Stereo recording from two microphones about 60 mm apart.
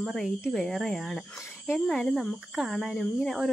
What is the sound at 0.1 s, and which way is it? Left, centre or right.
Speech, centre.